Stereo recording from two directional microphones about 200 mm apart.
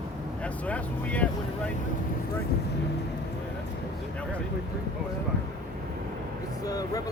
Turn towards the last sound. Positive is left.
turn(degrees=20)  # may be behind; listen again after turning